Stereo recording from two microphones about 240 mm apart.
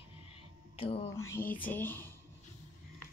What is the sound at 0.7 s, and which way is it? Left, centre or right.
Speech, left.